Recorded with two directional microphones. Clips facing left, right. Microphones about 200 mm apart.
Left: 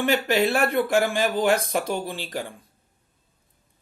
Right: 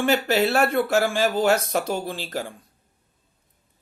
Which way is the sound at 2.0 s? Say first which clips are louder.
Right 1 dB; 15° left (ahead or behind).